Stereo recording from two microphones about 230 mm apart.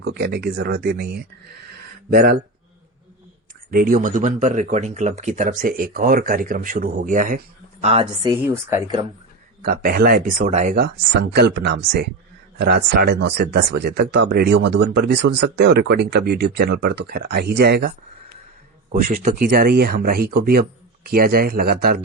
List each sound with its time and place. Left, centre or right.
0.1 s speech: right
3.7 s speech: right; by 9.0 s centre
9.6 s speech: right